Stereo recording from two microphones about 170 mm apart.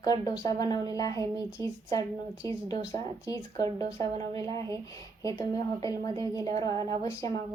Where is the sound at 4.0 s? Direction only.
20° left (ahead or behind).